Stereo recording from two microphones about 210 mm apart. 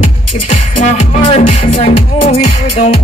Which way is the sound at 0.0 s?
35° left (ahead or behind).